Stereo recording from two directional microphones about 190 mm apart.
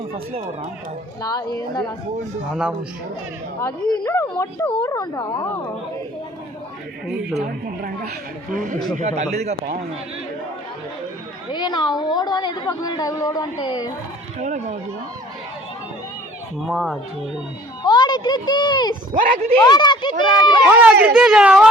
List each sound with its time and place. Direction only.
0.1 s speech: 30° right (ahead or behind)
1.2 s a woman's voice: 20° left (ahead or behind)
3.6 s speech: 15° left (ahead or behind)
7.3 s a woman's voice: 50° right (ahead or behind)
11.5 s a woman's voice: 20° left (ahead or behind)
14.3 s speech: 40° right (ahead or behind)
16.6 s speech: centre (ahead or behind)
17.8 s a woman's voice: 25° left (ahead or behind)
19.1 s a woman's voice: 45° right (ahead or behind)
19.6 s a woman's voice: 20° left (ahead or behind)
20.7 s speech: 10° right (ahead or behind)